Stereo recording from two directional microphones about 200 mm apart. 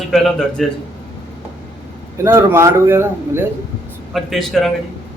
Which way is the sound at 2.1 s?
15° right (ahead or behind).